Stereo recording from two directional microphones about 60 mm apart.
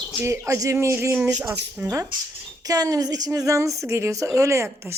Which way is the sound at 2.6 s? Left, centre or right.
Right.